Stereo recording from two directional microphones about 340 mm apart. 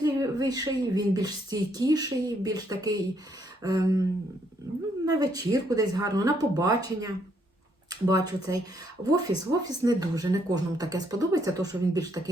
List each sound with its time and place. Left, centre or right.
0.0 s speech: centre
5.0 s speech: centre